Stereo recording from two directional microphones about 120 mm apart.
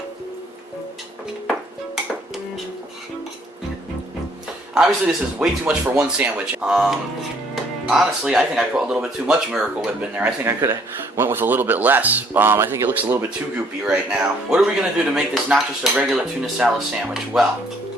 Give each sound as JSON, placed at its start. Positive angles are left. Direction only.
{"t": 4.7, "sound": "speech", "side_deg": -5}